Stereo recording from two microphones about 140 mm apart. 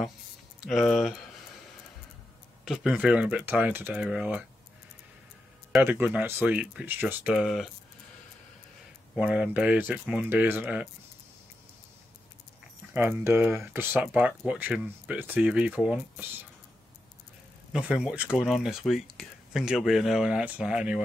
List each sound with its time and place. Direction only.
0.7 s speech: centre (ahead or behind)
2.6 s speech: centre (ahead or behind)
5.8 s speech: 15° right (ahead or behind)
9.1 s speech: 5° right (ahead or behind)
12.9 s speech: 15° right (ahead or behind)
17.7 s speech: 5° right (ahead or behind)